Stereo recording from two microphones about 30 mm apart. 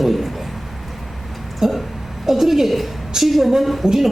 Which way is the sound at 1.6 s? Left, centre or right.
Centre.